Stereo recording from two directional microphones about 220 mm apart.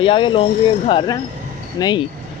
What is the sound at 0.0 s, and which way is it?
Speech, 25° left (ahead or behind).